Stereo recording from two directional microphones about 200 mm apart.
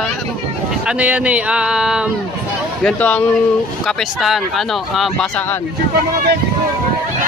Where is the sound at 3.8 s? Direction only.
Centre (ahead or behind).